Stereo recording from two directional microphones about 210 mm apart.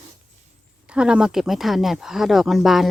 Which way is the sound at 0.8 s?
5° right (ahead or behind).